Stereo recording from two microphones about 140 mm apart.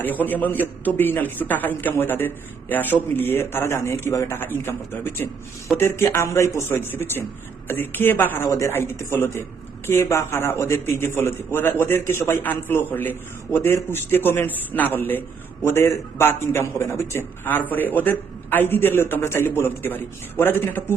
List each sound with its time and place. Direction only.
0.0 s a man's voice: 10° left (ahead or behind)